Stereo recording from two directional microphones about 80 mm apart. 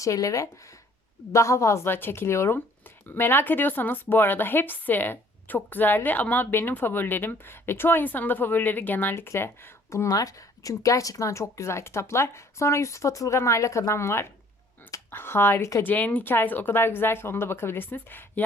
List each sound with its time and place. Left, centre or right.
0.0 s a woman's voice: left
9.9 s a woman's voice: left
15.9 s a woman's voice: centre